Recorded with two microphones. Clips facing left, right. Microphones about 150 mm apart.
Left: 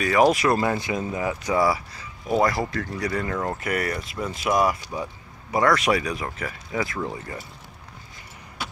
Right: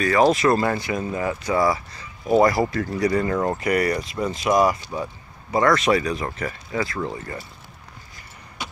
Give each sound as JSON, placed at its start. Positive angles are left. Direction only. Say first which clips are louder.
{"t": 0.0, "sound": "speech", "louder": "right 1 dB", "side_deg": 10}
{"t": 6.7, "sound": "speech", "louder": "right 1 dB", "side_deg": 15}
{"t": 8.6, "sound": "a sound", "louder": "even", "side_deg": 5}